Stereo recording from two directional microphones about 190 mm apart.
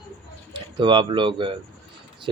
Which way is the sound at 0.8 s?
25° right (ahead or behind).